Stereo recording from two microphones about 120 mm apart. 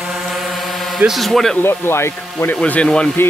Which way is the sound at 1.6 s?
20° left (ahead or behind).